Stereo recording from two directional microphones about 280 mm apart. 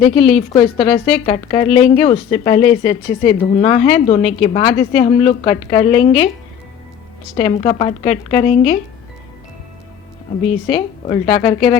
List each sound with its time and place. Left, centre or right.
0.3 s speech: centre
7.3 s speech: centre
10.7 s speech: centre